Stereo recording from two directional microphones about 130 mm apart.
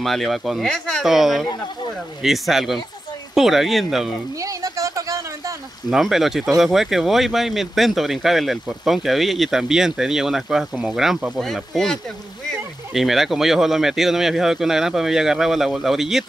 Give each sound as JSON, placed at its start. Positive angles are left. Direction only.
{"t": 0.0, "sound": "speech", "side_deg": 0}
{"t": 4.4, "sound": "a sound", "side_deg": -25}
{"t": 5.9, "sound": "speech", "side_deg": 0}